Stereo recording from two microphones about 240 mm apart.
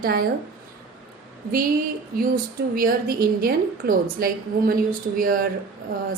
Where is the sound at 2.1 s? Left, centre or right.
Right.